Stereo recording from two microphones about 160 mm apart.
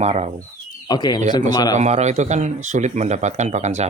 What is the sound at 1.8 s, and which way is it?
Speech, 45° right (ahead or behind).